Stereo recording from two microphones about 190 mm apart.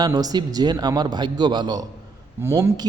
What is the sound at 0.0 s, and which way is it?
A man's voice, 20° right (ahead or behind).